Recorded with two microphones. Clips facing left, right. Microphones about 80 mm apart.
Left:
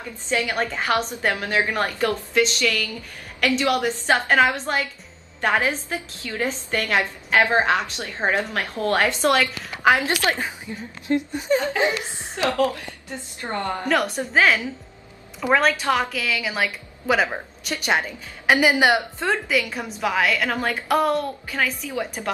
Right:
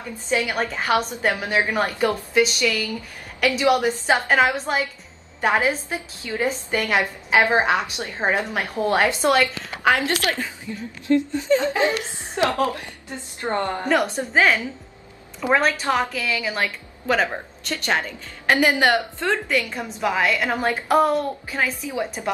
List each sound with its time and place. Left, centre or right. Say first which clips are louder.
0.3 s a woman's voice: right 1 dB; centre
9.9 s a woman's voice: even; left
11.6 s a woman's voice: right 1 dB; right
13.8 s a woman's voice: even; centre
19.4 s a woman's voice: even; centre